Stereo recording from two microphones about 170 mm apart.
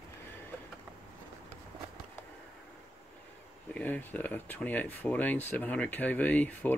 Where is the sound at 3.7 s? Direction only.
10° left (ahead or behind).